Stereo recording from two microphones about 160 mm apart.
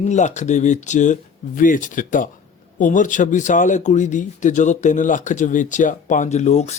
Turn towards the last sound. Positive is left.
turn(degrees=45)  # may be behind; listen again after turning